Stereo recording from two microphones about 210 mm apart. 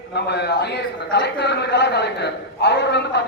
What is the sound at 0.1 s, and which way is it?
A man's voice, 55° left (ahead or behind).